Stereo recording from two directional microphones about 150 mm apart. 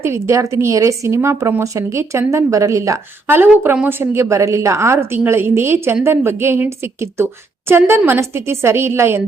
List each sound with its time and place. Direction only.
0.0 s a woman's voice: 20° right (ahead or behind)